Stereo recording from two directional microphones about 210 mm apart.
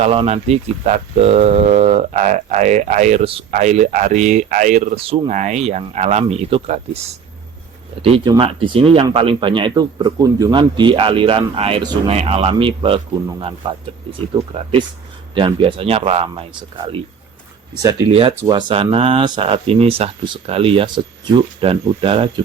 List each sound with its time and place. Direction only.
0.0 s speech: 30° right (ahead or behind)
8.0 s speech: 25° right (ahead or behind)
18.1 s speech: 25° right (ahead or behind)